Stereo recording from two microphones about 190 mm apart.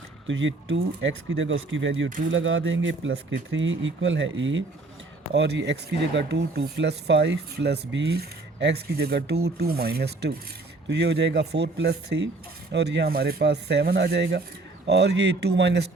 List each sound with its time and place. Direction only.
0.3 s speech: 85° right
2.3 s speech: 90° right
5.3 s speech: 65° right (ahead or behind)